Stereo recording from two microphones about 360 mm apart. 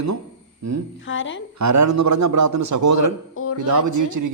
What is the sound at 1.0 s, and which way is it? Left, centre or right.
Speech, left.